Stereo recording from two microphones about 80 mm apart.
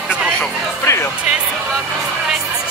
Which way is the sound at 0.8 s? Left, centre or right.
Left.